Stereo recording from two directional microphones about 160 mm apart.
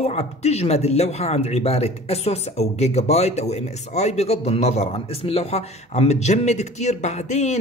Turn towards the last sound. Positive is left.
turn(degrees=45)  # may be behind; listen again after turning